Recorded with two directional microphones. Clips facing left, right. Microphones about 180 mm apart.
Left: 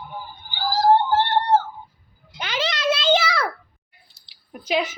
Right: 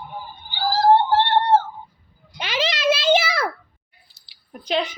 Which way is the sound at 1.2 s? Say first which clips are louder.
Right 2 dB; 25° right (ahead or behind).